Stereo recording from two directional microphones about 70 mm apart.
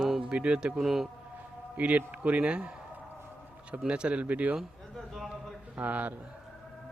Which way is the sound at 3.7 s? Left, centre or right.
Centre.